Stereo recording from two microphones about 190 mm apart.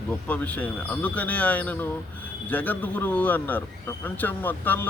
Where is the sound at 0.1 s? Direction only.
10° left (ahead or behind).